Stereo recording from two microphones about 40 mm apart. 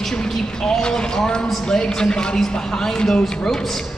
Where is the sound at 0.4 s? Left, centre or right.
Centre.